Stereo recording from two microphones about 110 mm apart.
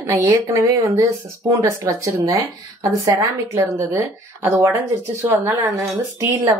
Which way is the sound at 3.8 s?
20° right (ahead or behind).